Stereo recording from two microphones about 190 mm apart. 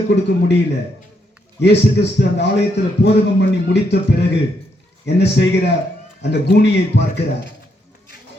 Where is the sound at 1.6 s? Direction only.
65° left (ahead or behind).